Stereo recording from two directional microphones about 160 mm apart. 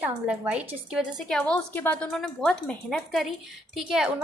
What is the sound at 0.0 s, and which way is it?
A woman's voice, 5° right (ahead or behind).